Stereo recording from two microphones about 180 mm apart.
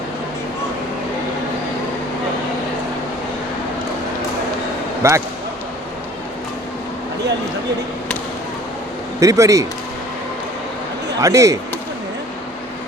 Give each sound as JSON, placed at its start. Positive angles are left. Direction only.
{"t": 5.0, "sound": "speech", "side_deg": -15}
{"t": 9.2, "sound": "speech", "side_deg": -20}
{"t": 11.2, "sound": "speech", "side_deg": -20}